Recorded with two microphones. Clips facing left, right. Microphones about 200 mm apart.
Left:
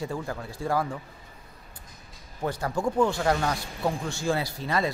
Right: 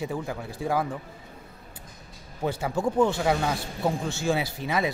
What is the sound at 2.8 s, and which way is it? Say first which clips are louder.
Speech: right 1 dB; 25° right (ahead or behind).